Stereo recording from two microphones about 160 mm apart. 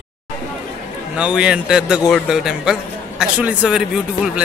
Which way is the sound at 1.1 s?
5° right (ahead or behind).